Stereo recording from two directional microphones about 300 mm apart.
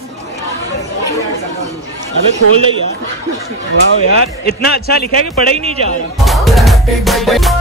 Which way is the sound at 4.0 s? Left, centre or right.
Left.